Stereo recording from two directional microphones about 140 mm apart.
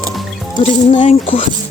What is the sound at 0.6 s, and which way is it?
Speech, 50° left (ahead or behind).